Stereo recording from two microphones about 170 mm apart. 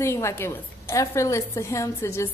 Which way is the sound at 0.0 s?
15° left (ahead or behind).